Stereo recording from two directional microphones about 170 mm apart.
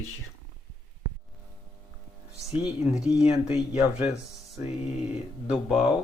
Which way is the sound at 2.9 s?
5° right (ahead or behind).